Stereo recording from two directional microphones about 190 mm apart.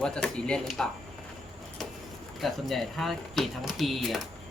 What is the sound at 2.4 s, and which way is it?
Speech, centre (ahead or behind).